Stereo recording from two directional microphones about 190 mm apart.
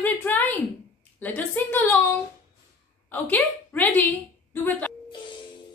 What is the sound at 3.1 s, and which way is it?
Speech, 10° left (ahead or behind).